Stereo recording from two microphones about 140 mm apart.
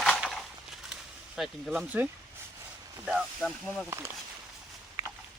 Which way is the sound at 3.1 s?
Centre (ahead or behind).